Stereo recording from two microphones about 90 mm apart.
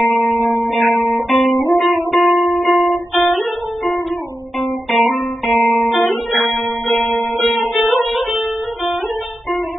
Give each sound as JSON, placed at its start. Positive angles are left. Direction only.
{"t": 0.4, "sound": "music", "side_deg": -30}
{"t": 0.7, "sound": "music", "side_deg": 0}
{"t": 4.6, "sound": "guitar", "side_deg": 0}
{"t": 6.3, "sound": "music", "side_deg": 0}